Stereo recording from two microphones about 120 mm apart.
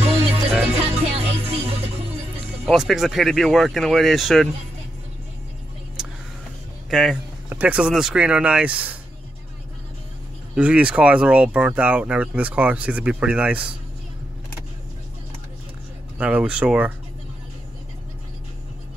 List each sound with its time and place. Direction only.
0.7 s music: 60° right (ahead or behind)
2.6 s speech: centre (ahead or behind)
6.0 s vehicle: 5° right (ahead or behind)
6.9 s speech: centre (ahead or behind)
7.4 s speech: 15° right (ahead or behind)
10.5 s speech: 10° right (ahead or behind)
16.2 s speech: 10° right (ahead or behind)